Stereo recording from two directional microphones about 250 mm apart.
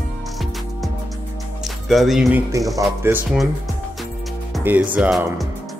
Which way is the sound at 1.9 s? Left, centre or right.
Centre.